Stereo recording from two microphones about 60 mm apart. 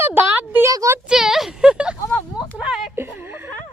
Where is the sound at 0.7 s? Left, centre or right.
Right.